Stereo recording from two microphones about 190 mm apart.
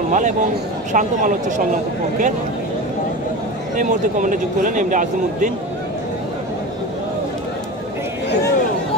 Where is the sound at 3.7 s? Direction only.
45° right (ahead or behind).